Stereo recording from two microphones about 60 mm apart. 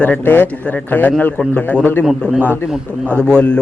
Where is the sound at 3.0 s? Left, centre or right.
Right.